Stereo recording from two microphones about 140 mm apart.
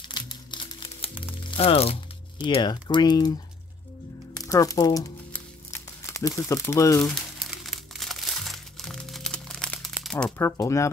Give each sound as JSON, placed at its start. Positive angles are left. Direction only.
{"t": 0.1, "sound": "crumpling", "side_deg": 30}
{"t": 1.5, "sound": "speech", "side_deg": 45}
{"t": 2.4, "sound": "speech", "side_deg": 35}
{"t": 4.5, "sound": "crumpling", "side_deg": 25}
{"t": 7.0, "sound": "speech", "side_deg": 10}
{"t": 7.3, "sound": "crumpling", "side_deg": 0}
{"t": 10.3, "sound": "speech", "side_deg": 20}